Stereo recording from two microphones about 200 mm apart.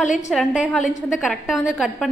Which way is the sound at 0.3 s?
Centre (ahead or behind).